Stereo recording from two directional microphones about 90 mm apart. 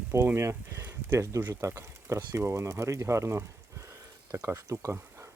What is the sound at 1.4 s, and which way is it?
Speech, 20° right (ahead or behind).